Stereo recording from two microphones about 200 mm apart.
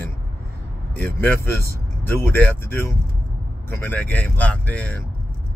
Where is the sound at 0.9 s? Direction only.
5° left (ahead or behind).